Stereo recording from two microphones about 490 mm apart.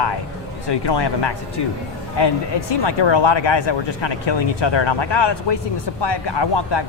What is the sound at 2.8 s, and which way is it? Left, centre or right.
Speech, left.